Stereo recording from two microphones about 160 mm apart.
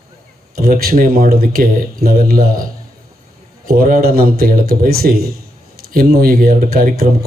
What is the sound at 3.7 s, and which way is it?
A man's voice, 60° right (ahead or behind).